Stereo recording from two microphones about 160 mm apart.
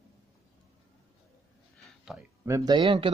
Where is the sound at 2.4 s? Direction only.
20° right (ahead or behind).